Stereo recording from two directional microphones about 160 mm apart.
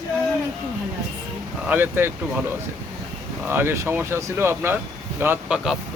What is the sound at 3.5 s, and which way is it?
Speech, 15° right (ahead or behind).